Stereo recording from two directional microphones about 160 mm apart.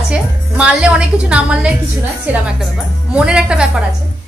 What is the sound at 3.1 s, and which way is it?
Speech, 5° right (ahead or behind).